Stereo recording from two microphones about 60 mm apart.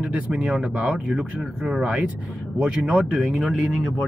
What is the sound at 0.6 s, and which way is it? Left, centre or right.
Speech, centre.